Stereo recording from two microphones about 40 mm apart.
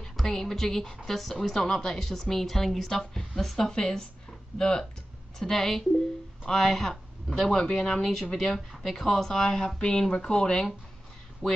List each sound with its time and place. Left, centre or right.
0.2 s a woman's voice: centre
11.4 s speech: centre